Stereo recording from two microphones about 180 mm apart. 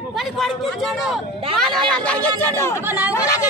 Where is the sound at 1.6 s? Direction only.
5° left (ahead or behind).